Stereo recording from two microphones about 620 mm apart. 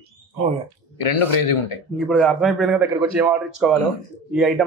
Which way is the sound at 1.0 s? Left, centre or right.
Left.